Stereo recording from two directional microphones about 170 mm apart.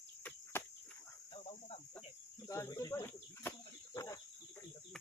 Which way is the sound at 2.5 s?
20° left (ahead or behind).